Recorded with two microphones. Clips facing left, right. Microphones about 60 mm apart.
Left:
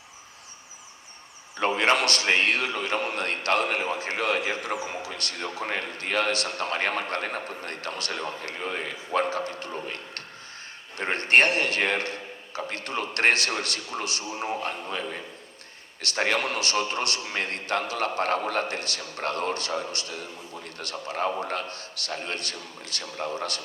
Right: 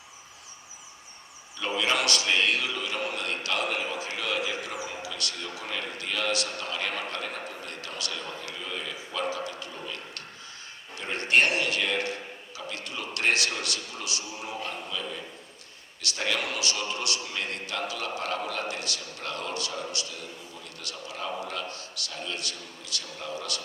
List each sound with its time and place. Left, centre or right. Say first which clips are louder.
1.5 s a man's voice: left 5 dB; left